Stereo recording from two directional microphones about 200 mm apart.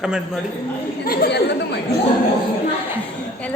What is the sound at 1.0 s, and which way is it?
Speech, 50° left (ahead or behind).